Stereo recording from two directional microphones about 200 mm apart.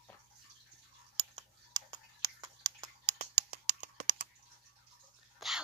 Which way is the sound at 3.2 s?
40° right (ahead or behind).